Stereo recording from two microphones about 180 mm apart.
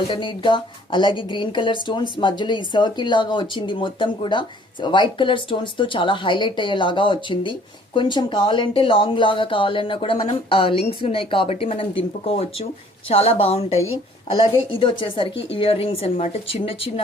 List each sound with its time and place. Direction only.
0.1 s speech: 25° left (ahead or behind)